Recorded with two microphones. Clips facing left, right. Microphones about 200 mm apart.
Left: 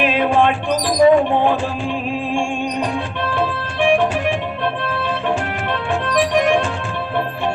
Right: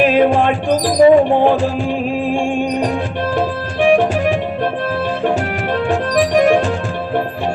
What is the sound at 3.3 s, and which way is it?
Music, 40° right (ahead or behind).